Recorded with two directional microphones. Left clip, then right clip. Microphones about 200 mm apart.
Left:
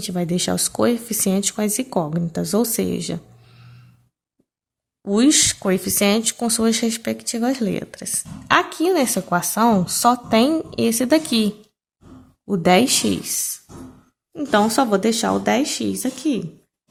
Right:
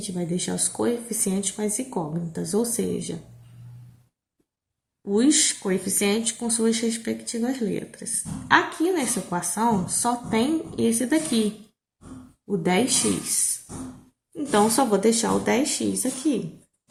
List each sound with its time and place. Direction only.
0.0 s speech: 55° left (ahead or behind)
5.0 s speech: 55° left (ahead or behind)
12.5 s speech: 55° left (ahead or behind)